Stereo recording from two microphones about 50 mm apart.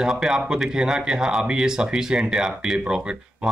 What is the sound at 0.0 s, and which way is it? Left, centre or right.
Speech, centre.